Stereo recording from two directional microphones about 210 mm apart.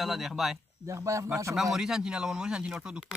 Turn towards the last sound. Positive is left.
turn(degrees=-5)  # may be behind; listen again after turning